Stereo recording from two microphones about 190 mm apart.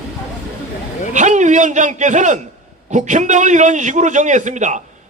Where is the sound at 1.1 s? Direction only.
40° right (ahead or behind).